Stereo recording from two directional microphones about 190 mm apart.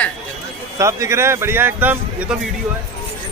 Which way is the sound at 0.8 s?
15° right (ahead or behind).